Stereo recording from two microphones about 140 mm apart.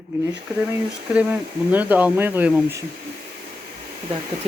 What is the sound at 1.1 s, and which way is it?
Speech, 10° right (ahead or behind).